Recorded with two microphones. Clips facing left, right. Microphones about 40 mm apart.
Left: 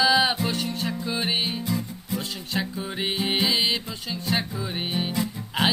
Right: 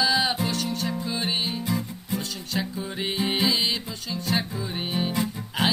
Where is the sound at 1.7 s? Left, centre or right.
Centre.